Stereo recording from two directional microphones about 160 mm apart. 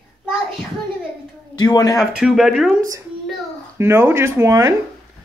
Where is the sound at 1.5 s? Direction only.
25° left (ahead or behind).